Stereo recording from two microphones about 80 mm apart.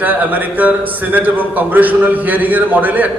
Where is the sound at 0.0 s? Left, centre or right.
Right.